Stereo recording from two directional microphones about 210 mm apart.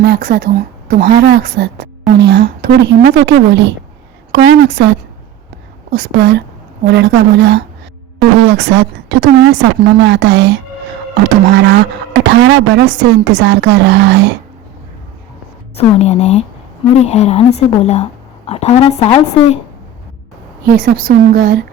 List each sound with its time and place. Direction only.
0.0 s a woman's voice: 45° right (ahead or behind)
15.7 s a woman's voice: 30° left (ahead or behind)
20.7 s a woman's voice: 40° right (ahead or behind)